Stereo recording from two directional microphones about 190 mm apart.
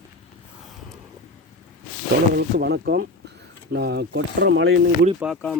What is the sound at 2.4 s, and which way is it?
Speech, 60° right (ahead or behind).